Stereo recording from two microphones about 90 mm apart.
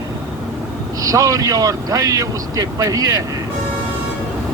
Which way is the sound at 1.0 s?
40° right (ahead or behind).